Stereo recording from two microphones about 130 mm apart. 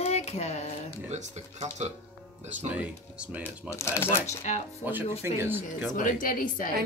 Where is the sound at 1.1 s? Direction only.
65° right (ahead or behind).